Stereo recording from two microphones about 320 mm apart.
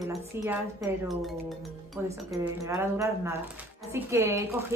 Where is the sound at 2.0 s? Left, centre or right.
Centre.